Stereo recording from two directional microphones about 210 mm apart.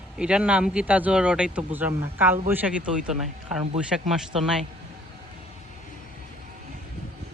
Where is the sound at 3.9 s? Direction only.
Centre (ahead or behind).